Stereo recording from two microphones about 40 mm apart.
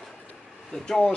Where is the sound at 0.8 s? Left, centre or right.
Centre.